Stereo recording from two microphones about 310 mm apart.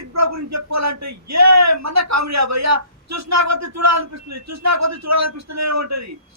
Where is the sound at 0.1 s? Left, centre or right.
Right.